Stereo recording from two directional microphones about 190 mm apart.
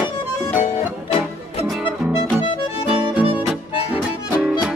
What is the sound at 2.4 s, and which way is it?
Music, 30° left (ahead or behind).